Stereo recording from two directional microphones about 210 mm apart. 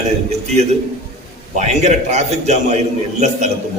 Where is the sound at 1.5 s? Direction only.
35° right (ahead or behind).